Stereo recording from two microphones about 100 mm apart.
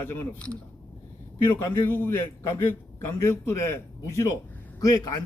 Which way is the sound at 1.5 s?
20° left (ahead or behind).